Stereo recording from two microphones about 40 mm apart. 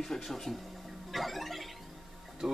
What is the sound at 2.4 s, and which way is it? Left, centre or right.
Speech, centre.